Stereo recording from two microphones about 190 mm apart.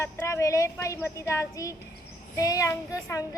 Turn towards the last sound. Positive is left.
turn(degrees=15)  # may be behind; listen again after turning